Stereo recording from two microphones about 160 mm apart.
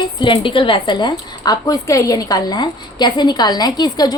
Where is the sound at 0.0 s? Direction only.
30° left (ahead or behind).